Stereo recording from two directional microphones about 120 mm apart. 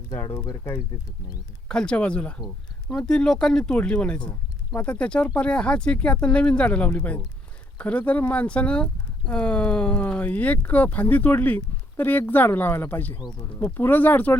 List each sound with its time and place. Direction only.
0.3 s speech: 20° left (ahead or behind)
1.6 s speech: 5° left (ahead or behind)